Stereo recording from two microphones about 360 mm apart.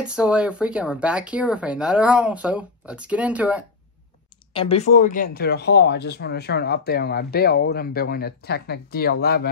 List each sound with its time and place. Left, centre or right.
0.0 s speech: centre
4.6 s speech: centre